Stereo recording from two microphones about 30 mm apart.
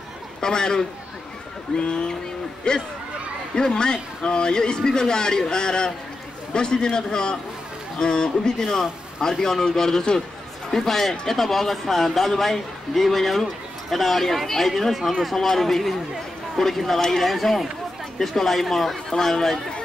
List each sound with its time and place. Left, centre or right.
0.4 s speech: left
8.5 s speech: centre
15.3 s speech: centre